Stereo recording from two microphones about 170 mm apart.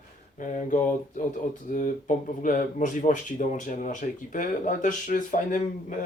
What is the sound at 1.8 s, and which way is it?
Speech, 50° left (ahead or behind).